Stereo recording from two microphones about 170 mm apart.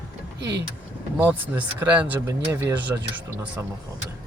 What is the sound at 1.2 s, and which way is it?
Speech, 10° right (ahead or behind).